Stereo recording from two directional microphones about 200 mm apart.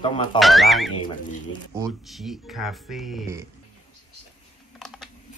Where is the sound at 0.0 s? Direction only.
25° left (ahead or behind).